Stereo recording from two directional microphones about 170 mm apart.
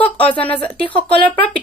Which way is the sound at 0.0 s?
10° left (ahead or behind).